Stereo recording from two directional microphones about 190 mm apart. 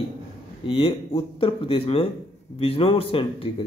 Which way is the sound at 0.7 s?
30° left (ahead or behind).